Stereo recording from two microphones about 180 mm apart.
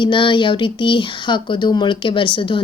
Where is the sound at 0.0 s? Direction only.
25° left (ahead or behind).